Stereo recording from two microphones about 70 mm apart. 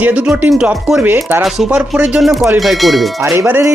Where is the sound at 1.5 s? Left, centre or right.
Centre.